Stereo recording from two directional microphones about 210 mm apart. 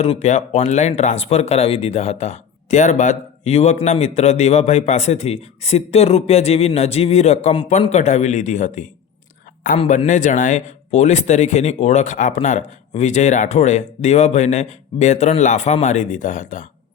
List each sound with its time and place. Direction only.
0.0 s speech: 30° left (ahead or behind)